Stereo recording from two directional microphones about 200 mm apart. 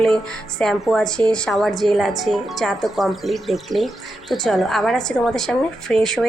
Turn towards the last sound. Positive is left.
turn(degrees=0)  # may be behind; listen again after turning